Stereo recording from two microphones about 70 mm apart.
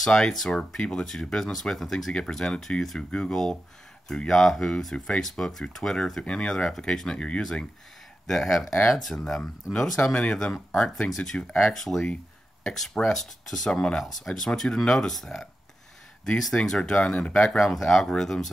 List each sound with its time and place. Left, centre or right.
0.0 s speech: centre
8.3 s speech: centre